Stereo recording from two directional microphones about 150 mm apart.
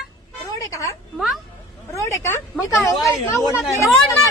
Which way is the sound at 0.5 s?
20° left (ahead or behind).